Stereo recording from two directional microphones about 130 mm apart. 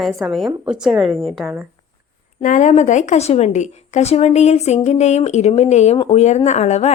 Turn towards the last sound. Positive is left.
turn(degrees=60)  # may be behind; listen again after turning